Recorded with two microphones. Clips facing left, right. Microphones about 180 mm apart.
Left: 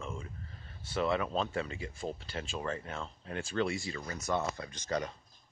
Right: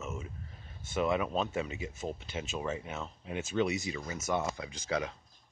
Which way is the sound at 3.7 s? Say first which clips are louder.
Right 2 dB; 20° right (ahead or behind).